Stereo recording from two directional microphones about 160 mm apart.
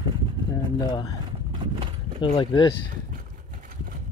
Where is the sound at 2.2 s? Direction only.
25° left (ahead or behind).